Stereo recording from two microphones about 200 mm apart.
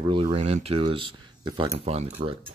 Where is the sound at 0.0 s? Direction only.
25° right (ahead or behind).